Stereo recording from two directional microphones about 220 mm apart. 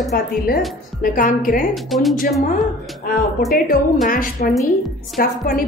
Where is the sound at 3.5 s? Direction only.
40° left (ahead or behind).